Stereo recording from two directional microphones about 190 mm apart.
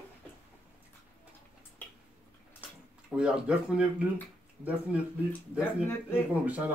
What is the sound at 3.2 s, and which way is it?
Speech, 5° right (ahead or behind).